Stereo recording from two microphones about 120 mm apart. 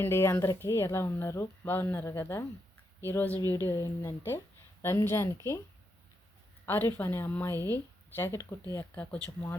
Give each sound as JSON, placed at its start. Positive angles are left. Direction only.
{"t": 0.0, "sound": "speech", "side_deg": 20}
{"t": 6.7, "sound": "speech", "side_deg": 20}